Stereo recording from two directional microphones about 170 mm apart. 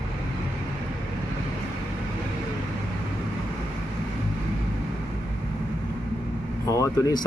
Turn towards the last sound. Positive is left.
turn(degrees=20)  # may be behind; listen again after turning